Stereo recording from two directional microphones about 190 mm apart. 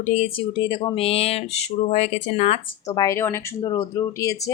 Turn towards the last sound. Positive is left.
turn(degrees=15)  # may be behind; listen again after turning